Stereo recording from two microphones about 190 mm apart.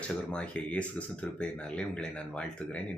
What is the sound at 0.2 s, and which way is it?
Speech, 5° left (ahead or behind).